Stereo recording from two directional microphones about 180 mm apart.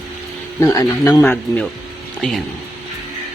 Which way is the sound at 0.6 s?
15° left (ahead or behind).